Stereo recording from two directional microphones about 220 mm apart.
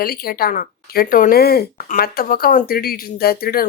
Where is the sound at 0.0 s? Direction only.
45° left (ahead or behind).